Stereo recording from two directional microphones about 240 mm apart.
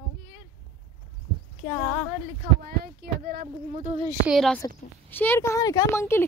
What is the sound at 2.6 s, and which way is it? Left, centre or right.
Speech, right.